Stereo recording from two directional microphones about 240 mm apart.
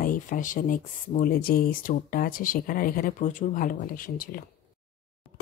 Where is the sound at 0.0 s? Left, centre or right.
Left.